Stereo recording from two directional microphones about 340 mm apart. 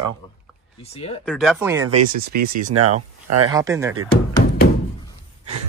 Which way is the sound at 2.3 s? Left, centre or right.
Right.